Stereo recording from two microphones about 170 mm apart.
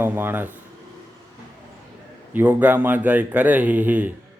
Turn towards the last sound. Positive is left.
turn(degrees=-10)  # may be behind; listen again after turning